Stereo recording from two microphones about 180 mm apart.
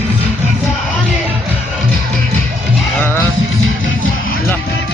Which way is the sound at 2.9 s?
10° left (ahead or behind).